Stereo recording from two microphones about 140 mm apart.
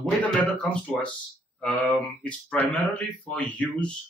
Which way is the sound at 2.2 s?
10° left (ahead or behind).